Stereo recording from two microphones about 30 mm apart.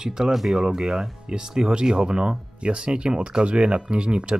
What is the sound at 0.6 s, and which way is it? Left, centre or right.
Speech, right.